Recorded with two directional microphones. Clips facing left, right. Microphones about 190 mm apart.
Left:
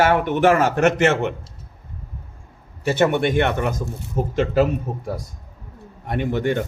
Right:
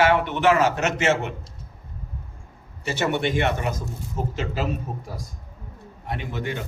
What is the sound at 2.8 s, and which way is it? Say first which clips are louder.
Speech: left 6 dB; 50° left (ahead or behind).